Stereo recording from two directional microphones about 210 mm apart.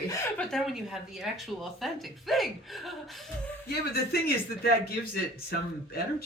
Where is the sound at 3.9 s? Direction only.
45° left (ahead or behind).